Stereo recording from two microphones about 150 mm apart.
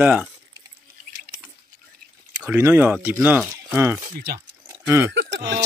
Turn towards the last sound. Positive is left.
turn(degrees=-20)  # may be behind; listen again after turning